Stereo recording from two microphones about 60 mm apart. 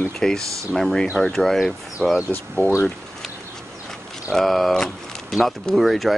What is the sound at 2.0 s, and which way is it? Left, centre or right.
Speech, left.